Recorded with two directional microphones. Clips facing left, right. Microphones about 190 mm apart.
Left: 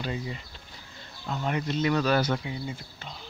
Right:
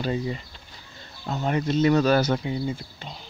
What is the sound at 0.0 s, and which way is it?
Speech, 35° right (ahead or behind).